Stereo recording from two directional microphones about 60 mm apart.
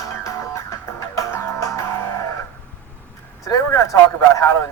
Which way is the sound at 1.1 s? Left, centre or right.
Left.